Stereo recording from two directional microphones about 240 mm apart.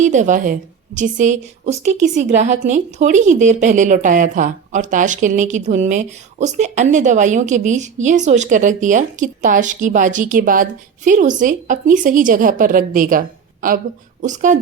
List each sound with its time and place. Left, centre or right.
0.0 s a woman's voice: right